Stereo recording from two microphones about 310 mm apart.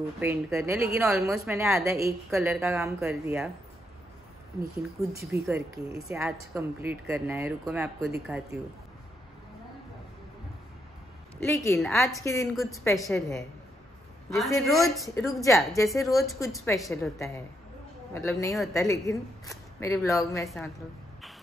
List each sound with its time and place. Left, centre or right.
0.2 s a woman's voice: centre
5.0 s a woman's voice: centre
11.3 s a woman's voice: centre